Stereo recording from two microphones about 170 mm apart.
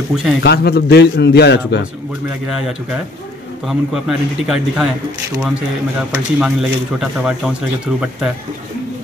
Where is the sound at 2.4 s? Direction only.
5° right (ahead or behind).